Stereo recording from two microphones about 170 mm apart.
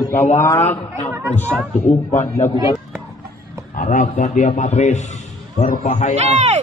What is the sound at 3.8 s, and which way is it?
A man's voice, 50° left (ahead or behind).